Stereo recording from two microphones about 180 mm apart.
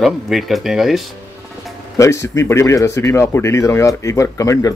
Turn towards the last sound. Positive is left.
turn(degrees=15)  # may be behind; listen again after turning